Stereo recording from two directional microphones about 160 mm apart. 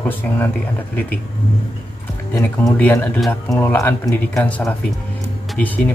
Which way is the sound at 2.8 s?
10° left (ahead or behind).